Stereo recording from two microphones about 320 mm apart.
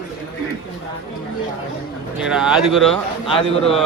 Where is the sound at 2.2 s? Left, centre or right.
Centre.